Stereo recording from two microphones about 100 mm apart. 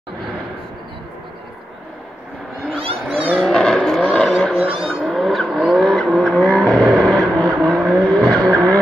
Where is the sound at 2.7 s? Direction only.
70° right (ahead or behind).